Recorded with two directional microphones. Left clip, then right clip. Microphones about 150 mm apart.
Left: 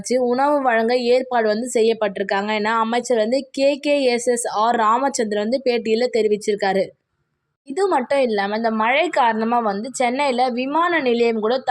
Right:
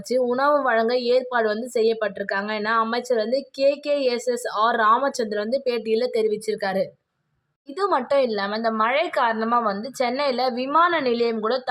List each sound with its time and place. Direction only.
0.1 s a woman's voice: 15° left (ahead or behind)